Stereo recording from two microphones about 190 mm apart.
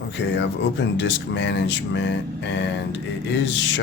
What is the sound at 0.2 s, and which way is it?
Speech, 65° left (ahead or behind).